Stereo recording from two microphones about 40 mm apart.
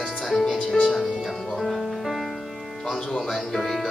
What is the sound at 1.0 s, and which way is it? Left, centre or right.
Music, centre.